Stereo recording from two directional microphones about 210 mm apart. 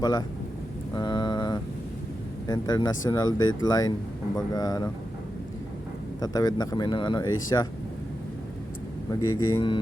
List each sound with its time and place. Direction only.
0.0 s speech: 20° left (ahead or behind)
0.9 s a sound: 20° left (ahead or behind)
2.5 s speech: 20° left (ahead or behind)
6.1 s speech: 20° left (ahead or behind)
9.2 s speech: 90° left
9.5 s speech: 20° left (ahead or behind)